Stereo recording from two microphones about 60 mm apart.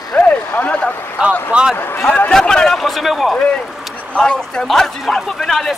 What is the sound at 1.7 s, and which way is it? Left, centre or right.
Speech, left.